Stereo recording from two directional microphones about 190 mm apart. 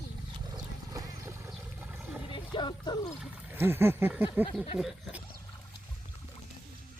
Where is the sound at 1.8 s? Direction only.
5° right (ahead or behind).